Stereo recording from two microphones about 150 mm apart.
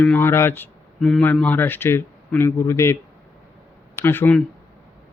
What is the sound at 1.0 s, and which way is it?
A man's voice, 5° left (ahead or behind).